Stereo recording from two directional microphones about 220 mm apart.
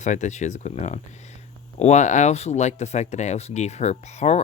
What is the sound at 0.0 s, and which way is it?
Speech, 35° left (ahead or behind).